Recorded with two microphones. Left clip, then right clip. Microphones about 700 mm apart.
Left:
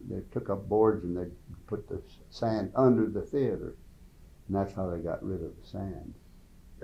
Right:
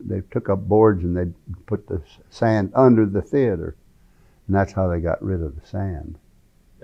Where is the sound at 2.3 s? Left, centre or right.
Right.